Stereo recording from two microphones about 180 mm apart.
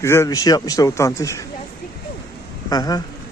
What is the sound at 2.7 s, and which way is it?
Speech, 20° left (ahead or behind).